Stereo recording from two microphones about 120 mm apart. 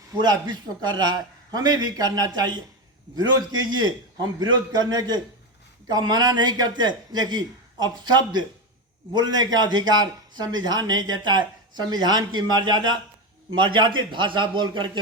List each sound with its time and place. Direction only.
0.1 s a man's voice: 35° right (ahead or behind)